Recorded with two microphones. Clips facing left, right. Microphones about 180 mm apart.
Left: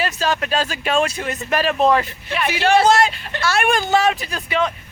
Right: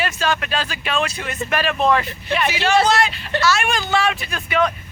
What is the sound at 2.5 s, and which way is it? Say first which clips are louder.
Speech: left 3 dB; 55° left (ahead or behind).